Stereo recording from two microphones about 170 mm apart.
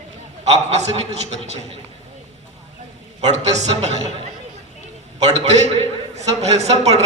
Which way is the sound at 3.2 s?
40° right (ahead or behind).